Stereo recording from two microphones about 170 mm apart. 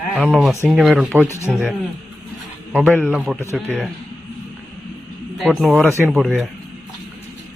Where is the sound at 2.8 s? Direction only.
10° left (ahead or behind).